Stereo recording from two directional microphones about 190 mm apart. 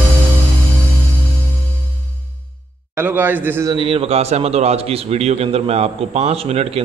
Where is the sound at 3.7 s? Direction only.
30° right (ahead or behind).